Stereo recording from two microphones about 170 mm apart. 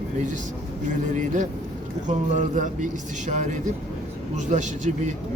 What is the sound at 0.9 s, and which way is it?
Speech, 50° right (ahead or behind).